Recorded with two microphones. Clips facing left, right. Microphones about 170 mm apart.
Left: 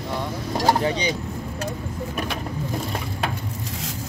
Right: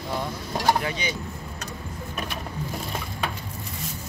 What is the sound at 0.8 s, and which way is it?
Speech, 35° left (ahead or behind).